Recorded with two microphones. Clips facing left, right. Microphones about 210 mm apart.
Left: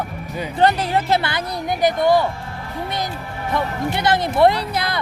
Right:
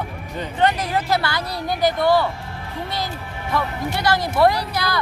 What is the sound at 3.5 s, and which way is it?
Speech, 20° left (ahead or behind).